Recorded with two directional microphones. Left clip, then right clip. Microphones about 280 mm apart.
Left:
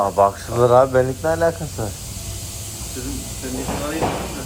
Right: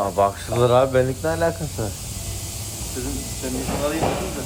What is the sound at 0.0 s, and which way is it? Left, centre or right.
Speech, centre.